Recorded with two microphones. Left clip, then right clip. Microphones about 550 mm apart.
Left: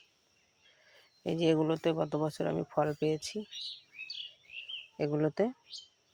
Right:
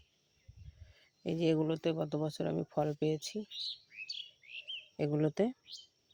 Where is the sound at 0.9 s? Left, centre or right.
Right.